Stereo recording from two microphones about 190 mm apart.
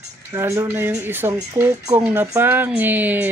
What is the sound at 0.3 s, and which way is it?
Speech, 15° right (ahead or behind).